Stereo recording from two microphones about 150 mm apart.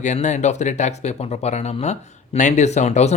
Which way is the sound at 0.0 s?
50° left (ahead or behind).